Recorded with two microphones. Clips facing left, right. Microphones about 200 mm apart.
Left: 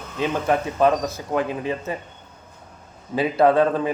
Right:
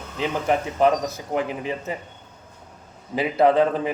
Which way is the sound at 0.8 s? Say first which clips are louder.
Left 1 dB; 20° right (ahead or behind).